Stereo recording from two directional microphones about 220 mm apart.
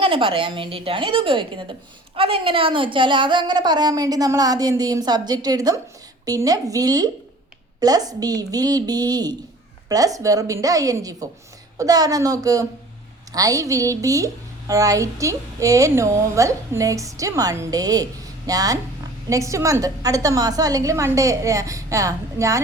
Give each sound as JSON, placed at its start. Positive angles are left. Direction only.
{"t": 0.0, "sound": "a woman's voice", "side_deg": -25}